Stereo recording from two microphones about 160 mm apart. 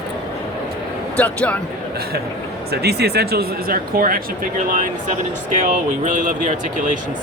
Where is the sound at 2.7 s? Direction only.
90° right; by 4.2 s 65° right (ahead or behind).